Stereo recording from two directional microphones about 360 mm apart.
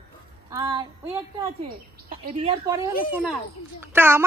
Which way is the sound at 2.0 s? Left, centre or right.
Right.